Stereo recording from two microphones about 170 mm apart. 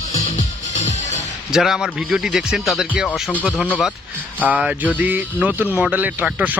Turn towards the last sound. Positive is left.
turn(degrees=-10)  # may be behind; listen again after turning